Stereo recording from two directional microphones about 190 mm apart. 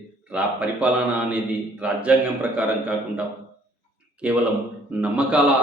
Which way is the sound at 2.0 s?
10° right (ahead or behind).